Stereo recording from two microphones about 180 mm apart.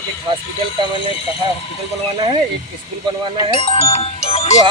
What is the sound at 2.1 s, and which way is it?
Speech, 30° right (ahead or behind).